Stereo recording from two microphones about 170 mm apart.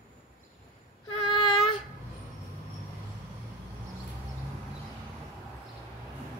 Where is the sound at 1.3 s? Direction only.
30° left (ahead or behind).